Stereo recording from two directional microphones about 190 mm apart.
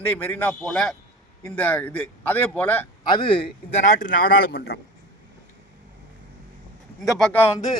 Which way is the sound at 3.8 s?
40° left (ahead or behind).